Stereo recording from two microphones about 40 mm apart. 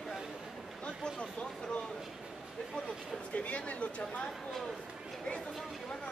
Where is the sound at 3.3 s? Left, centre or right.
Left.